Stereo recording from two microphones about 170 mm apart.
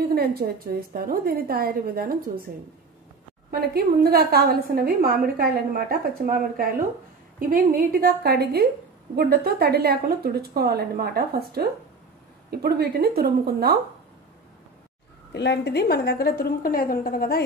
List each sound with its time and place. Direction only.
0.1 s a woman's voice: 65° right (ahead or behind)
3.7 s a woman's voice: 65° right (ahead or behind)
15.3 s a woman's voice: 90° left; by 17.4 s 60° left (ahead or behind)